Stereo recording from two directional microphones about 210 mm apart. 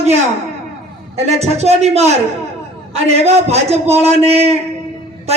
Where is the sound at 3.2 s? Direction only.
30° right (ahead or behind).